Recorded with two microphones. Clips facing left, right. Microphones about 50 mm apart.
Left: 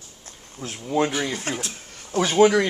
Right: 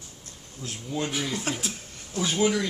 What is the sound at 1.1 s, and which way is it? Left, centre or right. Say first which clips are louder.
Speech: left 4 dB; centre.